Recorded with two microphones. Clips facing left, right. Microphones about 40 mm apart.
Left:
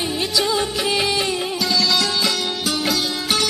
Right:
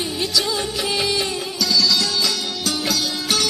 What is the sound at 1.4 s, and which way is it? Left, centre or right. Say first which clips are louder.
Music: even; left.